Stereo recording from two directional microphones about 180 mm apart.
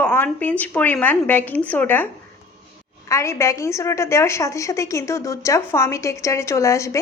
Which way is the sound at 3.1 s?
15° left (ahead or behind).